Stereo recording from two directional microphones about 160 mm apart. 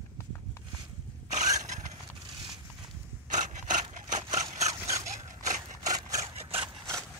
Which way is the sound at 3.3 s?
50° right (ahead or behind).